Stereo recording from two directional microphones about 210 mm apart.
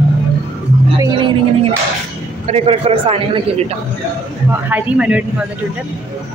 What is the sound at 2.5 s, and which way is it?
A man's voice, 30° right (ahead or behind).